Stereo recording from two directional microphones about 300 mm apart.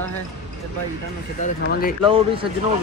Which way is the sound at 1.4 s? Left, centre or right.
Left.